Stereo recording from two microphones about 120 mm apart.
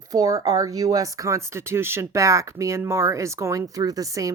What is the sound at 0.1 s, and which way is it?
Speech, 30° right (ahead or behind).